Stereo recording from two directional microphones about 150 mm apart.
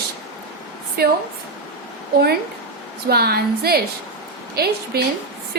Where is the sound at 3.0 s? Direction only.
90° right.